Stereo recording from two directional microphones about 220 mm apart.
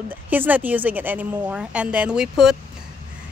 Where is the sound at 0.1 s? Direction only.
10° right (ahead or behind).